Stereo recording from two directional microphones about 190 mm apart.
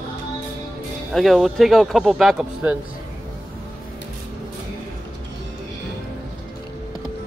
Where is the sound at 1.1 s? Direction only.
Centre (ahead or behind).